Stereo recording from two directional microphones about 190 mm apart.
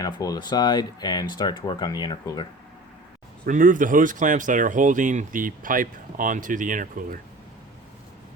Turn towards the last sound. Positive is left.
turn(degrees=-45)  # may be behind; listen again after turning